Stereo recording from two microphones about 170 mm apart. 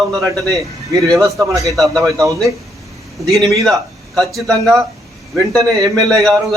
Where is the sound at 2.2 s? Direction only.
20° right (ahead or behind).